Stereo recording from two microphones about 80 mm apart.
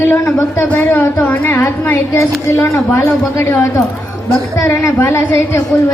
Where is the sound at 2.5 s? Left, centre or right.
Left.